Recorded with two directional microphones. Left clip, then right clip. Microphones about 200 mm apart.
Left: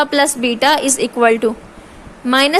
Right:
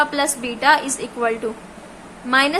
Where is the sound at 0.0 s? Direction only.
40° left (ahead or behind).